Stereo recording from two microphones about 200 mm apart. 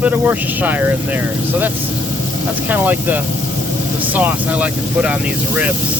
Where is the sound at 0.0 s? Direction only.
10° right (ahead or behind).